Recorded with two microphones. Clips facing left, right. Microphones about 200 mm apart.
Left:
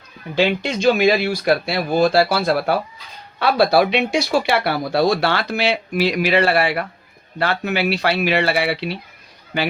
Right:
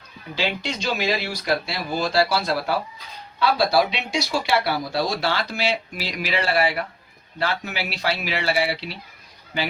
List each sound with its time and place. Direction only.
0.3 s speech: 55° left (ahead or behind)